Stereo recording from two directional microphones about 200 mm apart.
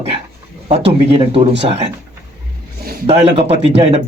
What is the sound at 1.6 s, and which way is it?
Speech, 30° right (ahead or behind).